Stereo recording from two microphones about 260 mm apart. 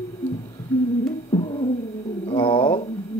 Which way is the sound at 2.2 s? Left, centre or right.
Centre.